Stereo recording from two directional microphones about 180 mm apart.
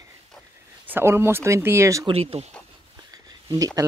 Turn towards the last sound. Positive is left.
turn(degrees=-20)  # may be behind; listen again after turning